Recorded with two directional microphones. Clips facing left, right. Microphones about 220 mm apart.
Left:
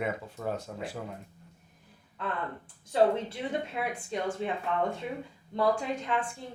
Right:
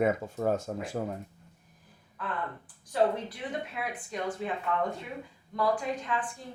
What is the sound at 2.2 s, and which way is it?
Speech, 25° left (ahead or behind).